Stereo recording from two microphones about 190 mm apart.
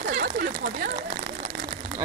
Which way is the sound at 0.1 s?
50° right (ahead or behind).